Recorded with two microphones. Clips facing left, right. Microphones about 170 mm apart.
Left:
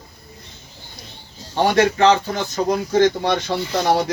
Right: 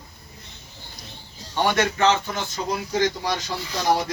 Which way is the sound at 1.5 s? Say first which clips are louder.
Left 6 dB; 35° left (ahead or behind).